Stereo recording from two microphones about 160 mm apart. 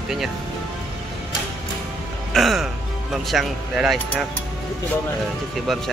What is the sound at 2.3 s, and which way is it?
Speech, centre (ahead or behind).